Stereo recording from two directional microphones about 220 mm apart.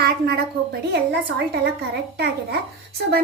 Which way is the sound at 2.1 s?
45° right (ahead or behind).